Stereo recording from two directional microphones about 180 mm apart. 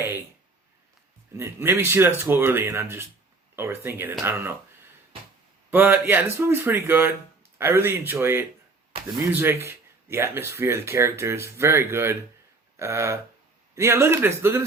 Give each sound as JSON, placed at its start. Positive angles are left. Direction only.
{"t": 0.0, "sound": "a sound", "side_deg": -15}
{"t": 1.4, "sound": "speech", "side_deg": -10}
{"t": 5.7, "sound": "speech", "side_deg": -10}